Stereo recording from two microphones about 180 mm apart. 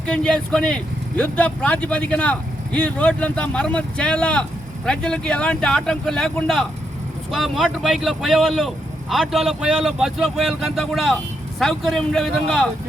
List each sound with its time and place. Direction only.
0.0 s speech: 5° left (ahead or behind)